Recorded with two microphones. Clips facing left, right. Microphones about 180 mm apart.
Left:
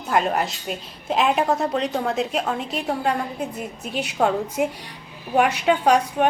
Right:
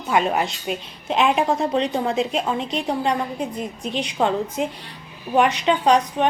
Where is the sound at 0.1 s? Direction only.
Centre (ahead or behind).